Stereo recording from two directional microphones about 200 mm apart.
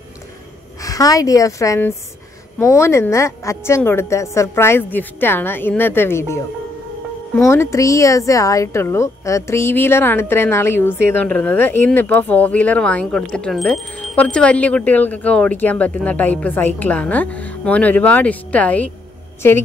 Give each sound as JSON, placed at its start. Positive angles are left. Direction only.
{"t": 0.8, "sound": "a woman's voice", "side_deg": 15}